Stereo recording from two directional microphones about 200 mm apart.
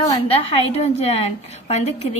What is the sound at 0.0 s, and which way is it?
A woman's voice, 25° left (ahead or behind).